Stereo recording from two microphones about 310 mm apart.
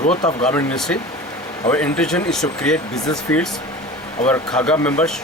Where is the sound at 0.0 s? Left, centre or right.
Left.